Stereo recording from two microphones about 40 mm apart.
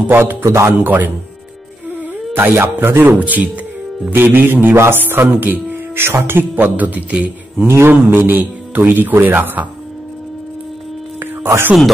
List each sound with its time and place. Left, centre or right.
0.4 s a man's voice: right
0.7 s speech: right
2.3 s a man's voice: right
3.2 s speech: right
4.1 s a man's voice: right
5.1 s speech: right
5.9 s speech: right
7.6 s a man's voice: right
8.1 s speech: right
11.1 s a sound: right